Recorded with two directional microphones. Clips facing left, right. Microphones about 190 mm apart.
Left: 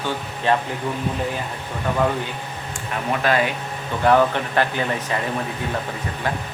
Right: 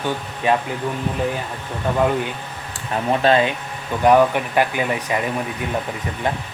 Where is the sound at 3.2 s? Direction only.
25° right (ahead or behind).